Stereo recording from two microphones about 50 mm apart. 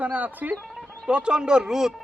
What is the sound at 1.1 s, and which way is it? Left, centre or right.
Speech, centre.